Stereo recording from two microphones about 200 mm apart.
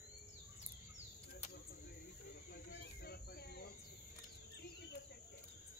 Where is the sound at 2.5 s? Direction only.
50° left (ahead or behind).